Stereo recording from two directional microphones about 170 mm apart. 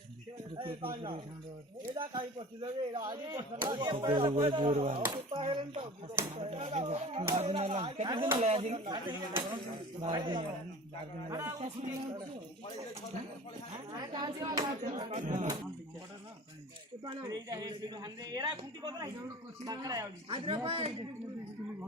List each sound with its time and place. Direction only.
0.5 s speech: 30° right (ahead or behind)
2.0 s speech: 30° right (ahead or behind)
8.9 s speech: 25° right (ahead or behind)
14.0 s speech: 25° right (ahead or behind)
15.1 s speech: 45° right (ahead or behind)
17.2 s speech: 20° right (ahead or behind)
20.3 s speech: 30° right (ahead or behind)